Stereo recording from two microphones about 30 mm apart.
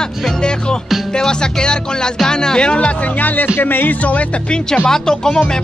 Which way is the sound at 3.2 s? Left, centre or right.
Left.